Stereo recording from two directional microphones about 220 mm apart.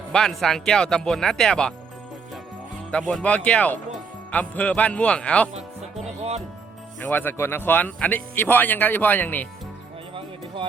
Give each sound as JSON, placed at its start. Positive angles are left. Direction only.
{"t": 0.1, "sound": "speech", "side_deg": 0}
{"t": 3.1, "sound": "speech", "side_deg": 5}
{"t": 5.5, "sound": "music", "side_deg": -30}
{"t": 7.0, "sound": "speech", "side_deg": 10}
{"t": 10.2, "sound": "music", "side_deg": -25}